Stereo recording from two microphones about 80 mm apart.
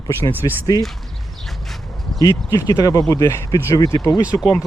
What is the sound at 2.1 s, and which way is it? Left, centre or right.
Speech, left.